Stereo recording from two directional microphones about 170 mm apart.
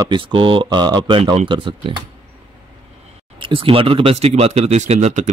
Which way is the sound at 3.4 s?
30° right (ahead or behind).